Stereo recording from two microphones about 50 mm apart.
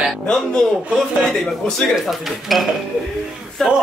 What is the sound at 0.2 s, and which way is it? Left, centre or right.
Speech, centre.